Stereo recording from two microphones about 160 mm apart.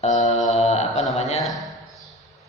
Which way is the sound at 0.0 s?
45° left (ahead or behind).